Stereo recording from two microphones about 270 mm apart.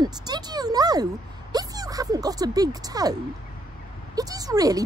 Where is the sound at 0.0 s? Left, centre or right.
Centre.